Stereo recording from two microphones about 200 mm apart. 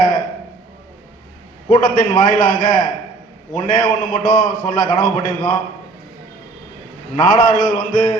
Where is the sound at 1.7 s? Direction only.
45° left (ahead or behind).